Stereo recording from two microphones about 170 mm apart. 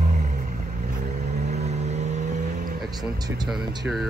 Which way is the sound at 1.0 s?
65° right (ahead or behind).